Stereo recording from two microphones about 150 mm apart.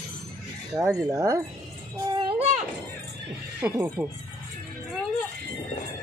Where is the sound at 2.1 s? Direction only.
35° right (ahead or behind).